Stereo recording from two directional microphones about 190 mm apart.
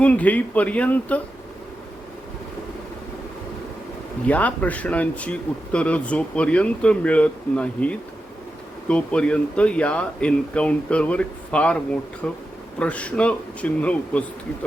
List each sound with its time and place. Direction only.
0.0 s speech: 10° left (ahead or behind)
4.3 s speech: 10° left (ahead or behind)